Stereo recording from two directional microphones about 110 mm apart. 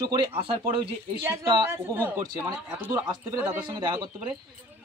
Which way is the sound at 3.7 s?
40° right (ahead or behind).